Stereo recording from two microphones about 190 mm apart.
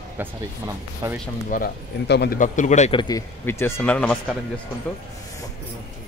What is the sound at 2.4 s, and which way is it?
Speech, 40° left (ahead or behind).